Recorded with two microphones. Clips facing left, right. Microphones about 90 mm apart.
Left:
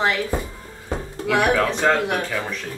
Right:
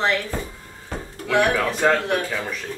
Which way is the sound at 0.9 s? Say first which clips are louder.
Left 4 dB; 15° left (ahead or behind).